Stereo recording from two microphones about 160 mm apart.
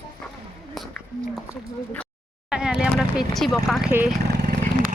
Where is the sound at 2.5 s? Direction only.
5° right (ahead or behind).